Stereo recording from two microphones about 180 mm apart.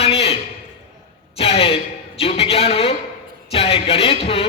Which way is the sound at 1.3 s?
30° left (ahead or behind).